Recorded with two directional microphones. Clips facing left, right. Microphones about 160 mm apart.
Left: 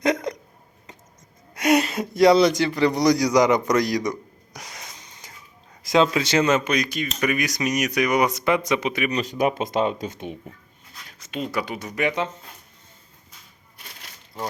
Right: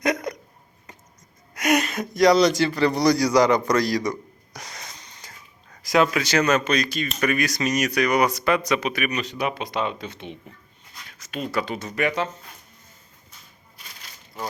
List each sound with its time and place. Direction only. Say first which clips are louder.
0.0 s hiccup: left 2 dB; 25° left (ahead or behind)
1.5 s speech: left 2 dB; 25° left (ahead or behind)
4.1 s a sound: even; 10° left (ahead or behind)
5.8 s speech: left 1 dB; 25° left (ahead or behind)
9.2 s speech: left 5 dB; 45° left (ahead or behind)
11.2 s speech: even; 20° left (ahead or behind)